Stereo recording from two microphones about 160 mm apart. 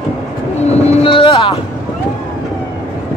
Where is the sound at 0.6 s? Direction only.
40° left (ahead or behind).